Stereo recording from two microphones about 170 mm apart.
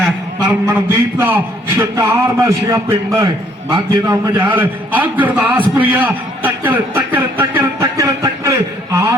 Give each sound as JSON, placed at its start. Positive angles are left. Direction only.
{"t": 0.0, "sound": "a man's voice", "side_deg": -10}